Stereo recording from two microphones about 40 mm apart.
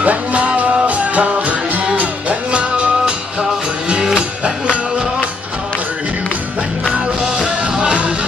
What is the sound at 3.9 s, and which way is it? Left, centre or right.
Music, right.